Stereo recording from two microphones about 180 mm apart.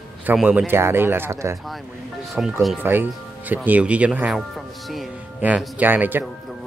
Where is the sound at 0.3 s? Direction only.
10° right (ahead or behind).